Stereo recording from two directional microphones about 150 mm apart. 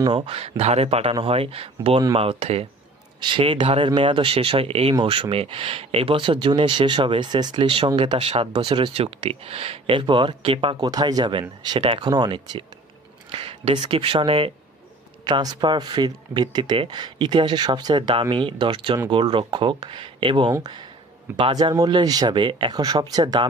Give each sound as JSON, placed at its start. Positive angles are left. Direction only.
{"t": 0.0, "sound": "speech", "side_deg": -35}